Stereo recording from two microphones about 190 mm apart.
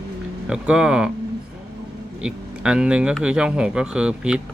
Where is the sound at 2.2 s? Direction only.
5° right (ahead or behind).